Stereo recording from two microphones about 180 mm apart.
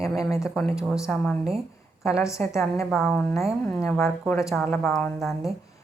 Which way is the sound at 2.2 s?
15° left (ahead or behind).